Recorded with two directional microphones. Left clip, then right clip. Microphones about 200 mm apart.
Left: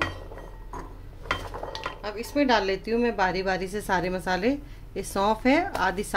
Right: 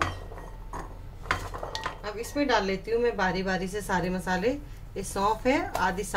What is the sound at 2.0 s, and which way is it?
A woman's voice, 40° left (ahead or behind).